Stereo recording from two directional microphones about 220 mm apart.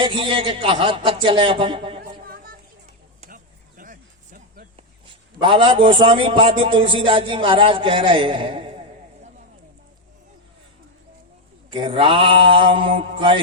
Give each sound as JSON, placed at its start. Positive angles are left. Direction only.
{"t": 0.0, "sound": "a man's voice", "side_deg": -25}
{"t": 2.0, "sound": "music", "side_deg": -45}
{"t": 3.2, "sound": "a sound", "side_deg": -40}
{"t": 5.0, "sound": "a sound", "side_deg": -20}
{"t": 5.9, "sound": "a man's voice", "side_deg": -25}
{"t": 11.7, "sound": "a man's voice", "side_deg": -25}